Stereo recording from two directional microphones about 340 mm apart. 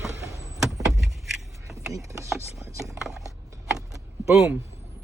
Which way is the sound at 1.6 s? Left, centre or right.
Centre.